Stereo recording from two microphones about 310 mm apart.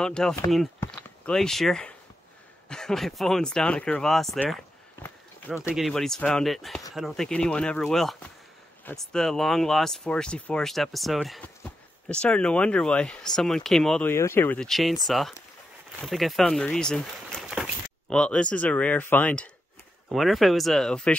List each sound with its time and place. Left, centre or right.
0.0 s speech: centre